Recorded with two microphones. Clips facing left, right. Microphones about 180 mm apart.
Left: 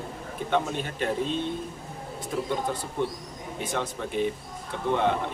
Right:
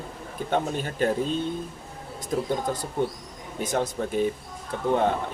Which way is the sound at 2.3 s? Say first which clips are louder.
Right 3 dB; 40° right (ahead or behind).